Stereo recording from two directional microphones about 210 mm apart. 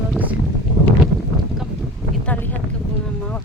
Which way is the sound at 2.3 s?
10° left (ahead or behind).